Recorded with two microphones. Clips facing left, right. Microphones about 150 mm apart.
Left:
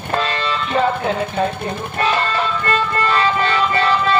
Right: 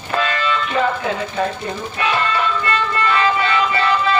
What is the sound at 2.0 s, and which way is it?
Music, 40° left (ahead or behind).